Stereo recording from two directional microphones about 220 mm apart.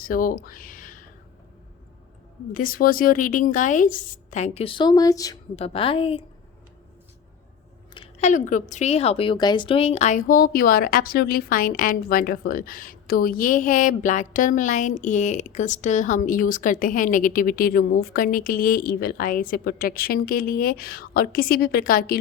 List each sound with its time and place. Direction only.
0.0 s speech: 40° left (ahead or behind)
2.5 s a woman's voice: 40° left (ahead or behind); by 5.4 s 15° left (ahead or behind)
5.5 s a woman's voice: 25° left (ahead or behind)
7.9 s a woman's voice: 30° left (ahead or behind)